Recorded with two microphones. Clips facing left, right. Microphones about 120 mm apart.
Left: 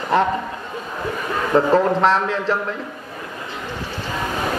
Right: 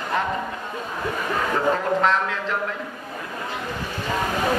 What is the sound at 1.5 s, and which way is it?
Speech, 30° left (ahead or behind).